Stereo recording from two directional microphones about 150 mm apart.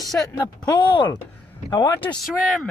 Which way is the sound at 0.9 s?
30° left (ahead or behind).